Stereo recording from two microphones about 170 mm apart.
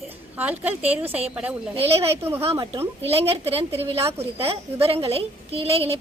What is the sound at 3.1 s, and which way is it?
A woman's voice, 35° right (ahead or behind).